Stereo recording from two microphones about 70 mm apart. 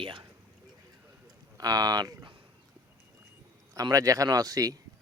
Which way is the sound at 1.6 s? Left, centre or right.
Right.